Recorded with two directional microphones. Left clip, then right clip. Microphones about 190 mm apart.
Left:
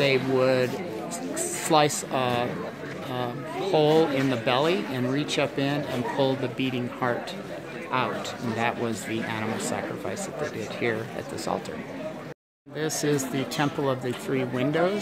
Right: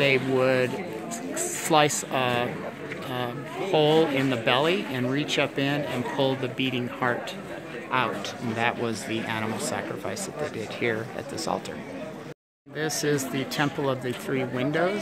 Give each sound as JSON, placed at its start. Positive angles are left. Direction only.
{"t": 0.0, "sound": "speech", "side_deg": 0}
{"t": 3.7, "sound": "speech", "side_deg": 0}
{"t": 8.5, "sound": "speech", "side_deg": 0}
{"t": 12.7, "sound": "speech", "side_deg": 5}